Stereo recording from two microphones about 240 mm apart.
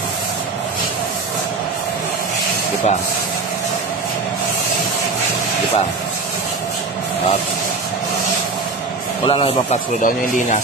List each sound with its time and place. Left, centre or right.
9.2 s a man's voice: left